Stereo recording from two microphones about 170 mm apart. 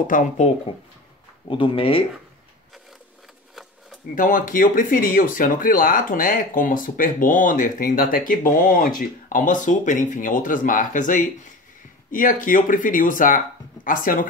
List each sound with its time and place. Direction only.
0.0 s speech: 50° left (ahead or behind)
1.5 s speech: 30° left (ahead or behind)
4.1 s speech: 50° left (ahead or behind)